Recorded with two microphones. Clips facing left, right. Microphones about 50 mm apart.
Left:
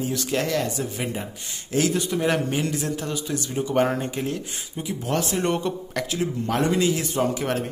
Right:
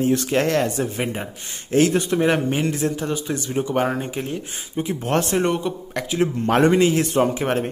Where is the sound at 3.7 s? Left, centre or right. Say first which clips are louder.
Left 2 dB; centre; by 4.9 s right.